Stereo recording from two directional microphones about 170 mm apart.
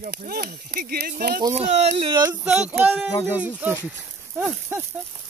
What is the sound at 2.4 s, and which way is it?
Speech, 5° right (ahead or behind).